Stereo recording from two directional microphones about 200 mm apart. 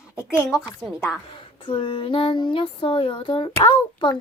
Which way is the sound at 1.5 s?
25° left (ahead or behind).